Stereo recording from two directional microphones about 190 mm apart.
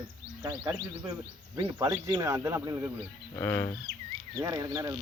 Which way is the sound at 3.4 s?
10° left (ahead or behind).